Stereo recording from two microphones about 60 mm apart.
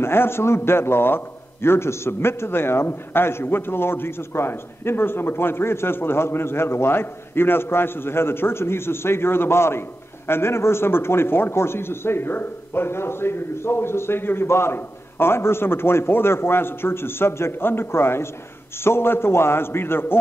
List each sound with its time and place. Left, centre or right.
0.0 s a man's voice: left